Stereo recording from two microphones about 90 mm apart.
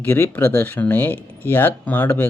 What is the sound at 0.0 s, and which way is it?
Speech, 20° left (ahead or behind).